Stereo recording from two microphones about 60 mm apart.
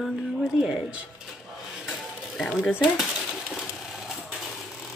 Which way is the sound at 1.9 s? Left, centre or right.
Centre.